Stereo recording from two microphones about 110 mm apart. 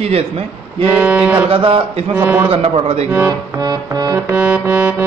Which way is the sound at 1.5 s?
55° right (ahead or behind).